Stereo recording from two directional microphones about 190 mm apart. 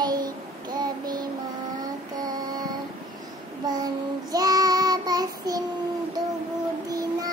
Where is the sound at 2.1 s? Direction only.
20° right (ahead or behind).